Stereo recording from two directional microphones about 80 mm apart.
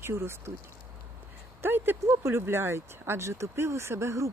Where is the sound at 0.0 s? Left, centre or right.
Right.